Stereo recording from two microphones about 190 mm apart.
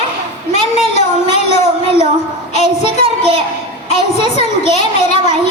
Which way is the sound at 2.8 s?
25° right (ahead or behind).